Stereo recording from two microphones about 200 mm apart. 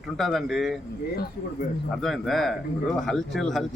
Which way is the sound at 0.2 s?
Centre (ahead or behind).